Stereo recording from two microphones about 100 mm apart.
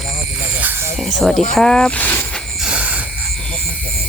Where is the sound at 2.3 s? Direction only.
5° left (ahead or behind).